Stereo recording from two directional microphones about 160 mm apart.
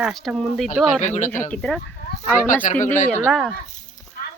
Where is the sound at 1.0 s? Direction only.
50° left (ahead or behind).